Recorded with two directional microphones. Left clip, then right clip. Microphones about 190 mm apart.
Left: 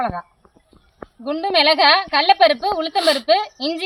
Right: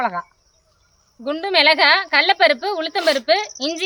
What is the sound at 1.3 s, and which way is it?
A woman's voice, 10° right (ahead or behind).